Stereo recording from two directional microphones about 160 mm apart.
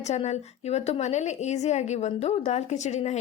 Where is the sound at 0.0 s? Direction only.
45° left (ahead or behind).